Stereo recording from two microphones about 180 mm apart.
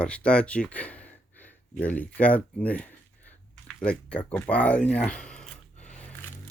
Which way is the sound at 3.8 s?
5° left (ahead or behind).